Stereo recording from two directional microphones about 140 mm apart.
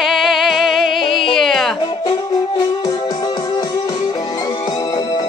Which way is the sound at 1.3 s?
Centre (ahead or behind).